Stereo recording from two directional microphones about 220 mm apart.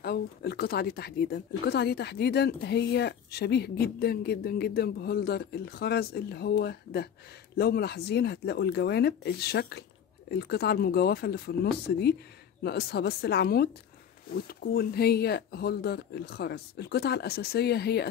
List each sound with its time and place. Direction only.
0.0 s speech: 45° left (ahead or behind)